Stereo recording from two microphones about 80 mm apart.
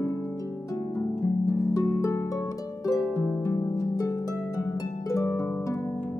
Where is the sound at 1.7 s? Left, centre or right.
Left.